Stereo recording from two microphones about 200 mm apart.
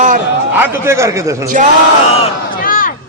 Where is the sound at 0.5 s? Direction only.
10° right (ahead or behind).